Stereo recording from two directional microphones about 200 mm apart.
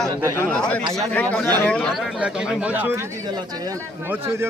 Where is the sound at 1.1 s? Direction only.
5° left (ahead or behind).